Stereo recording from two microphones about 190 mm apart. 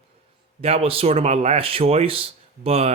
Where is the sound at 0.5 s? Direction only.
30° right (ahead or behind).